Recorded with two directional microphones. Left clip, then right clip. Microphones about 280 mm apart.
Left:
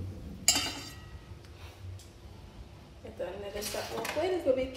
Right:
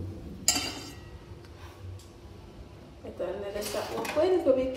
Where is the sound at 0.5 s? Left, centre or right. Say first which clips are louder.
Even; centre.